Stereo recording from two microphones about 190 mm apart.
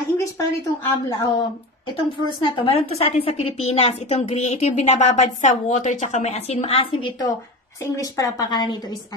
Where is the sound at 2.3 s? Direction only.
25° left (ahead or behind).